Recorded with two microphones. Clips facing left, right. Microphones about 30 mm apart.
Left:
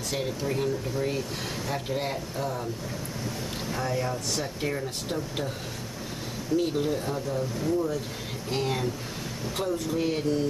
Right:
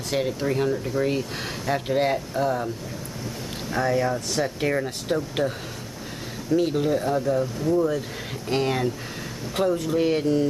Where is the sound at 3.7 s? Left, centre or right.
Right.